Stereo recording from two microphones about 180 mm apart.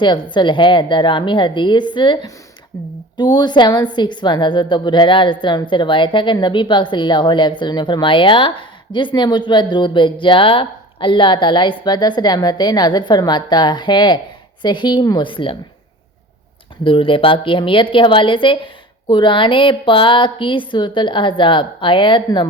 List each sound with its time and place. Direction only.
0.0 s a woman's voice: 25° left (ahead or behind)
16.8 s a woman's voice: 30° left (ahead or behind)